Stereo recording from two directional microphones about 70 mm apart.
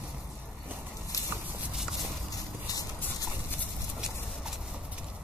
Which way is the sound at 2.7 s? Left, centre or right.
Left.